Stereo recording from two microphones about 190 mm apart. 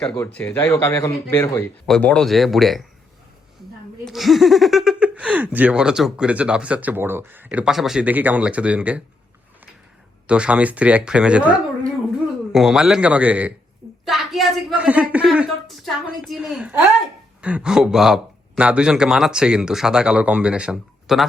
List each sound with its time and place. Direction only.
0.3 s speech: 5° left (ahead or behind)
4.0 s speech: centre (ahead or behind)
10.2 s speech: 5° right (ahead or behind)
12.5 s speech: centre (ahead or behind)